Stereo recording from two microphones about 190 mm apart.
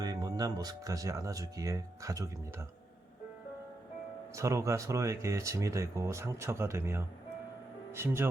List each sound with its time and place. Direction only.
0.0 s speech: 20° right (ahead or behind)
4.4 s speech: 15° right (ahead or behind)